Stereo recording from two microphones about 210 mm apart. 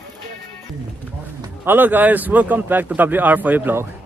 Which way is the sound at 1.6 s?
10° right (ahead or behind).